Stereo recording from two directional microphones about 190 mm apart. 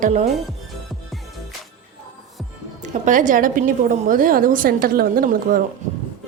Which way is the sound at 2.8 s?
40° right (ahead or behind).